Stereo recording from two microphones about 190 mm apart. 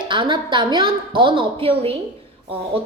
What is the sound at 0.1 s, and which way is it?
A woman's voice, 25° right (ahead or behind).